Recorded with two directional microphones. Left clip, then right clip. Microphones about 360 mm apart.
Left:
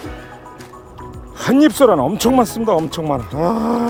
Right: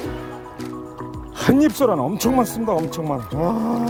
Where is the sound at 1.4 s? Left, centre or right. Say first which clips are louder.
Left 5 dB; centre.